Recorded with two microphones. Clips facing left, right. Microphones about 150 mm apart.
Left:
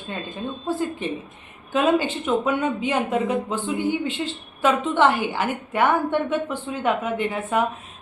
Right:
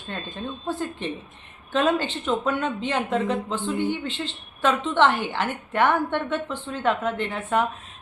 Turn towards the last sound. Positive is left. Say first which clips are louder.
# left 2 dB
turn(degrees=10)  # may be behind; listen again after turning